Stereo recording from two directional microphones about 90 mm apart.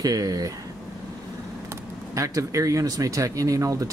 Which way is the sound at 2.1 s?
40° right (ahead or behind).